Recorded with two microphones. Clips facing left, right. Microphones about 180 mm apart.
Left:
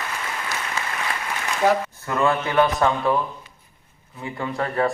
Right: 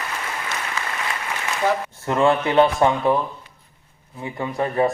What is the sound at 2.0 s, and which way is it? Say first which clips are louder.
A man's voice: right 4 dB; 25° right (ahead or behind).